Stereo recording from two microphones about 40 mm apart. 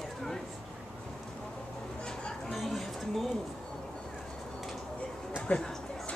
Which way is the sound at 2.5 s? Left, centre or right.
Centre.